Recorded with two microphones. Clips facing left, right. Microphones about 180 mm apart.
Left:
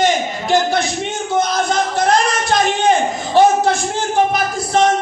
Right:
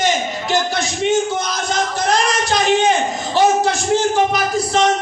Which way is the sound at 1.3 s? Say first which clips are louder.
Left 5 dB; 55° left (ahead or behind).